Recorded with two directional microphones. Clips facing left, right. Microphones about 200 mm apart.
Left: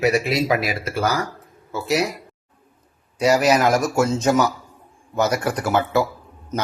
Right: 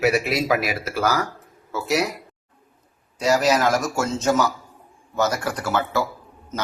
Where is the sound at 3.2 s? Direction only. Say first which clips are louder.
Left 2 dB; 15° left (ahead or behind).